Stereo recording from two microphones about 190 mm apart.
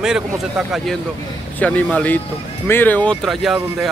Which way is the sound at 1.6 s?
5° left (ahead or behind).